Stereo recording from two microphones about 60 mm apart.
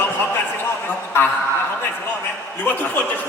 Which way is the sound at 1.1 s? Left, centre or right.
Left.